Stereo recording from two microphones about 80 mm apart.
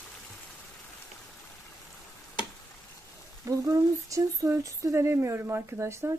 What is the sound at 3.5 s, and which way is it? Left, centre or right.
Speech, right.